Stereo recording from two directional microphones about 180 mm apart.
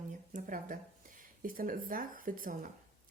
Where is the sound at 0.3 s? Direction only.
45° right (ahead or behind).